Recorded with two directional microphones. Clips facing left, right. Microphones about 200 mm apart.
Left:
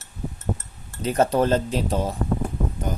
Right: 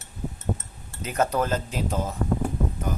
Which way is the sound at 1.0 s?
30° left (ahead or behind).